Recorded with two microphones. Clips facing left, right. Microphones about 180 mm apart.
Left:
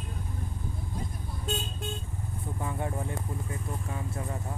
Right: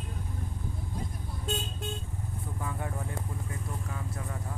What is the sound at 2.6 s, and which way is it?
Speech, 25° left (ahead or behind).